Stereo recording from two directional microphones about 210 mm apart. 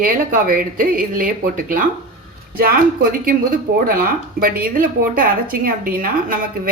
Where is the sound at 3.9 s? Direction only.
45° right (ahead or behind).